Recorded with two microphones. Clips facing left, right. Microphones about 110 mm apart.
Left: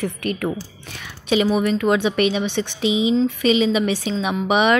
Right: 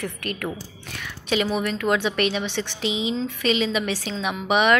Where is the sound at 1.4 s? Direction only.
5° left (ahead or behind).